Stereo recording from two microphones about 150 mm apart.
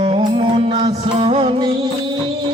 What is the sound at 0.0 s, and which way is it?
Music, 35° right (ahead or behind).